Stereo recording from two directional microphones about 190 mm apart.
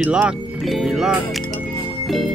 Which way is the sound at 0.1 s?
5° right (ahead or behind).